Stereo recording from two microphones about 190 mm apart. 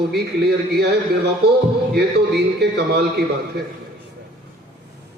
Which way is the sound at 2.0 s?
60° right (ahead or behind).